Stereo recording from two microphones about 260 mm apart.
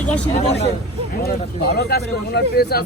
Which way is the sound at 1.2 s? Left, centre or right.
Left.